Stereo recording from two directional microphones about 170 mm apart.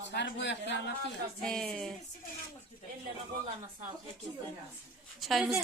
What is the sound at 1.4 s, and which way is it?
Speech, 5° left (ahead or behind).